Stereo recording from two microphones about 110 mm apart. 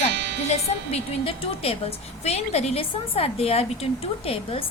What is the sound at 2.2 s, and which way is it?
A woman's voice, 75° left (ahead or behind).